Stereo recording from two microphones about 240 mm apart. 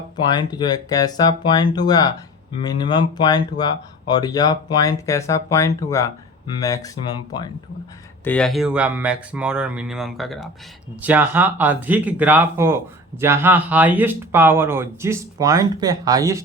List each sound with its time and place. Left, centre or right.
0.3 s speech: centre
8.2 s speech: centre